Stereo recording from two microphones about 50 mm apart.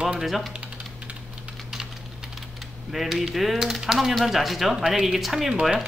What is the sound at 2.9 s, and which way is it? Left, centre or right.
Speech, centre.